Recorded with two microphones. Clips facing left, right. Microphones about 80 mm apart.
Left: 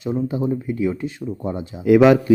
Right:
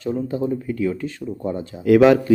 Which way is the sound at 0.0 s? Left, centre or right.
Centre.